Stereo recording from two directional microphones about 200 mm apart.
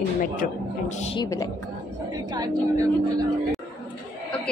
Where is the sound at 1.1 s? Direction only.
20° left (ahead or behind).